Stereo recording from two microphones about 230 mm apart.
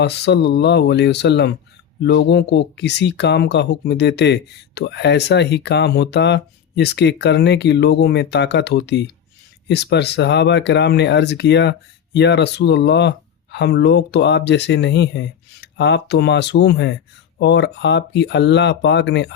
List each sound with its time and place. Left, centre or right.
0.0 s speech: left